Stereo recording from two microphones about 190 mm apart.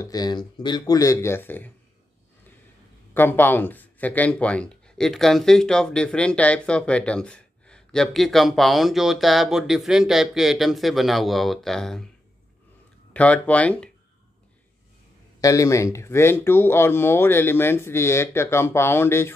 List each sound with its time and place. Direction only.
0.0 s speech: 20° left (ahead or behind)
3.2 s speech: 10° left (ahead or behind)
13.1 s speech: 5° left (ahead or behind)
15.4 s speech: 15° left (ahead or behind)